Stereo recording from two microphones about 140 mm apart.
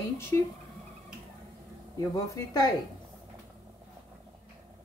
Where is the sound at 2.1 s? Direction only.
25° left (ahead or behind).